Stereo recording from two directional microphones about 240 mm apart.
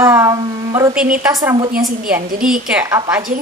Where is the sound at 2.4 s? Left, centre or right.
Centre.